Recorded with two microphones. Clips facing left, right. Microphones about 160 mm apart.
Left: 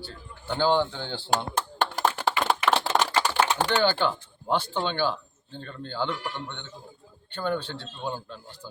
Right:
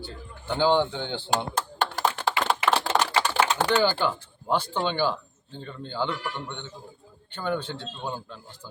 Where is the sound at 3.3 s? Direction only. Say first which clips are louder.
Right 1 dB; 10° right (ahead or behind).